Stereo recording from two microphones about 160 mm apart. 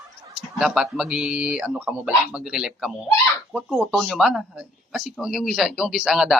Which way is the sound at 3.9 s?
Centre (ahead or behind).